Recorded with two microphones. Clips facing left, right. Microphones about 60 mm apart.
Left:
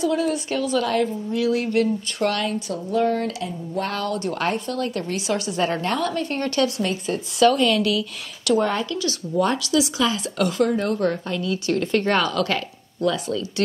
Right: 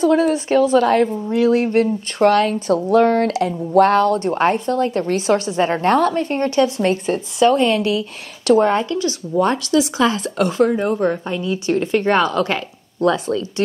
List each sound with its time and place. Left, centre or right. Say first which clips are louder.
0.0 s a woman's voice: right 7 dB; right
2.7 s speech: right 8 dB; right
3.9 s a woman's voice: right 10 dB; right
10.3 s a woman's voice: right 4 dB; right